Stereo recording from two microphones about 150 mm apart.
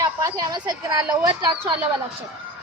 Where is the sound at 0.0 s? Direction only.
20° right (ahead or behind).